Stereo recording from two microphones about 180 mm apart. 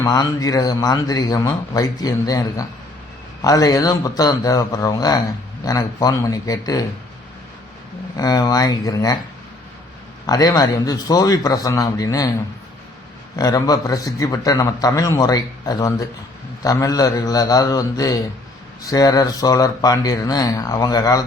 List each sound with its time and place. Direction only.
0.0 s a man's voice: 20° left (ahead or behind)
8.1 s a man's voice: 20° left (ahead or behind)
10.2 s a man's voice: 20° left (ahead or behind)
13.3 s a man's voice: 20° left (ahead or behind)